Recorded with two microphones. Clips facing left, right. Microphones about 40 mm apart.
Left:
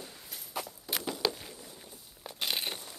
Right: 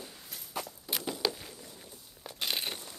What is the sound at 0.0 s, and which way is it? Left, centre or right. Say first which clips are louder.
Walk: even; centre.